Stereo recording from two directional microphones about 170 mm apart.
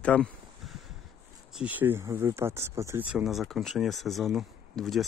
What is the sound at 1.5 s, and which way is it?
Speech, 10° right (ahead or behind).